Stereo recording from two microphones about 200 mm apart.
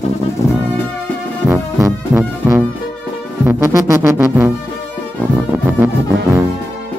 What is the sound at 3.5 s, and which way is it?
Music, 15° right (ahead or behind).